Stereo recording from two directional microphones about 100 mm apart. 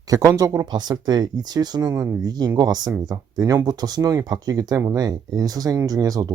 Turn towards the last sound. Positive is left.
turn(degrees=-40)  # may be behind; listen again after turning